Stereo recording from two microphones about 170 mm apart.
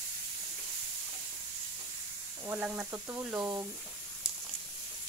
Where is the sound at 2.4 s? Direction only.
10° right (ahead or behind).